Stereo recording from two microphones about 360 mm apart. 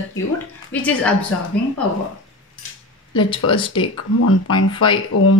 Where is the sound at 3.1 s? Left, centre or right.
Centre.